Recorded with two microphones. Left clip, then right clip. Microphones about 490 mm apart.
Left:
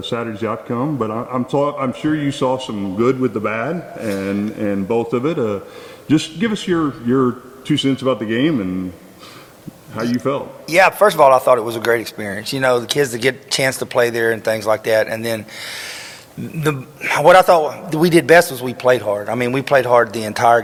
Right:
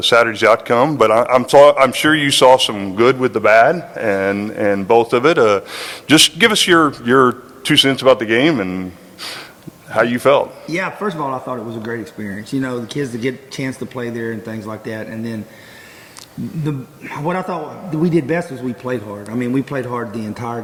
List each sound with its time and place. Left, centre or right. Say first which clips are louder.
0.0 s a man's voice: right 11 dB; right
9.9 s a man's voice: right 8 dB; right
10.7 s speech: left 9 dB; left
16.6 s speech: left 10 dB; left